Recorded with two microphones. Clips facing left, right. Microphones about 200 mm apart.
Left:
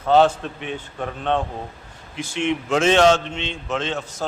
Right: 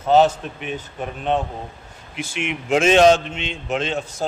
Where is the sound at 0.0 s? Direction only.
20° right (ahead or behind).